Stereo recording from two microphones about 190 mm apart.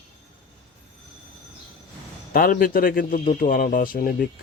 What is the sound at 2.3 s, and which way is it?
Speech, 50° left (ahead or behind).